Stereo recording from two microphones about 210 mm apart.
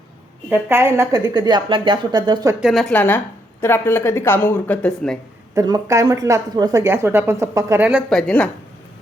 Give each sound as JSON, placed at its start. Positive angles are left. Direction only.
{"t": 0.5, "sound": "a woman's voice", "side_deg": -10}
{"t": 2.6, "sound": "speech", "side_deg": 0}
{"t": 5.5, "sound": "speech", "side_deg": -15}